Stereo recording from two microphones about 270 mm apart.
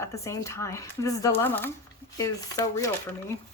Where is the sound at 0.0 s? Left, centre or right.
Centre.